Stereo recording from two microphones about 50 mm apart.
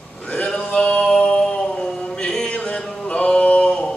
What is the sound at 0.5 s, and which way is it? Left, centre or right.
Music, centre.